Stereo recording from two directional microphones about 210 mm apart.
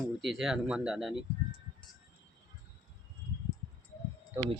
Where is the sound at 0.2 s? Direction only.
Centre (ahead or behind).